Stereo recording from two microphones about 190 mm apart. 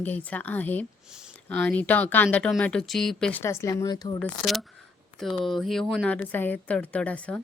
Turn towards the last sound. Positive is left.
turn(degrees=5)  # may be behind; listen again after turning